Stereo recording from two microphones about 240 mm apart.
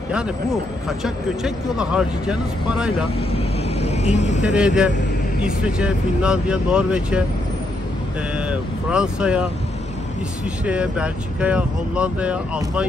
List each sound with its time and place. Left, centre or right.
0.8 s speech: centre
3.2 s vehicle: left
4.4 s speech: centre
8.4 s speech: centre
10.6 s speech: centre